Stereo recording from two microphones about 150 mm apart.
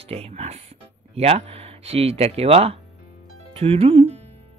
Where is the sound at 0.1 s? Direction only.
45° right (ahead or behind).